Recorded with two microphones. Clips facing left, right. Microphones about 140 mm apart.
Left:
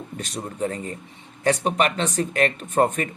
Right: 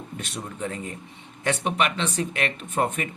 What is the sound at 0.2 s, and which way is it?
Speech, 35° left (ahead or behind).